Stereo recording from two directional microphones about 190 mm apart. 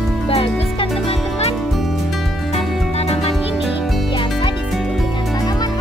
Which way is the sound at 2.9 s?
35° left (ahead or behind).